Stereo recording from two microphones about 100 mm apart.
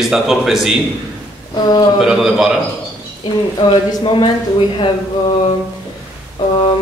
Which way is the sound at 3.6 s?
55° left (ahead or behind).